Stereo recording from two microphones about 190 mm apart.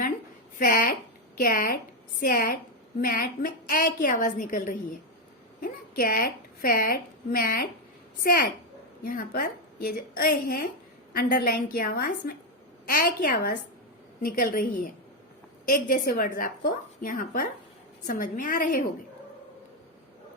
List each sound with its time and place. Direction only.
0.6 s a woman's voice: 45° left (ahead or behind)